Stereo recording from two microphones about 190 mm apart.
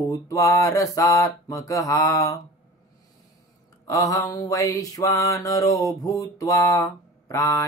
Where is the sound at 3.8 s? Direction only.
15° left (ahead or behind).